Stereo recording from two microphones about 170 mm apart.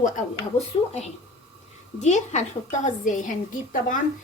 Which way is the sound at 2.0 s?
40° left (ahead or behind).